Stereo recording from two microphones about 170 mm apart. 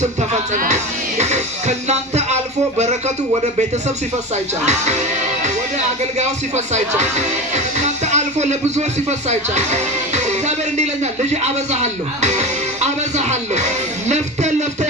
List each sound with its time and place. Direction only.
0.0 s music: 45° right (ahead or behind)
4.6 s music: 40° right (ahead or behind)
6.7 s speech: 40° right (ahead or behind)